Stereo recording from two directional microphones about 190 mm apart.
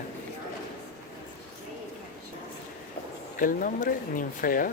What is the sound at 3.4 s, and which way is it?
Speech, 45° left (ahead or behind).